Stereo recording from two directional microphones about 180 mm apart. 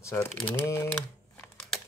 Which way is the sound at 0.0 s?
15° left (ahead or behind).